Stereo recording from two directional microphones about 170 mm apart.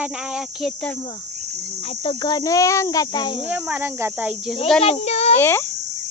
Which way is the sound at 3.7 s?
10° right (ahead or behind).